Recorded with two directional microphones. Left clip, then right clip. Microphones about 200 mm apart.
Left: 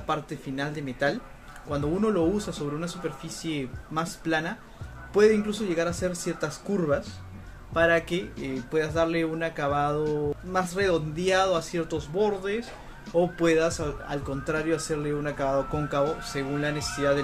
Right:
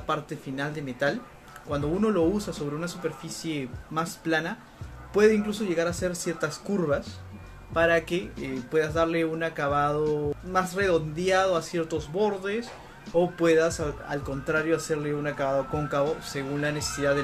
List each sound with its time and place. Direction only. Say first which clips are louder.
0.0 s speech: even; centre (ahead or behind)